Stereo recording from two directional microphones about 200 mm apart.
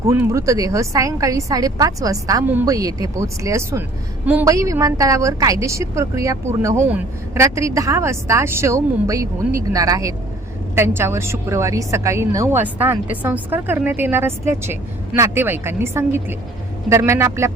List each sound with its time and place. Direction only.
0.1 s a woman's voice: 15° right (ahead or behind)